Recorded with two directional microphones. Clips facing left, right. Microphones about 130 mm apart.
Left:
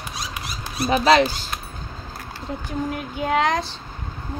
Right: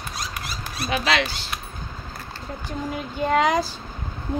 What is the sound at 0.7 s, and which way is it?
Speech, 30° left (ahead or behind).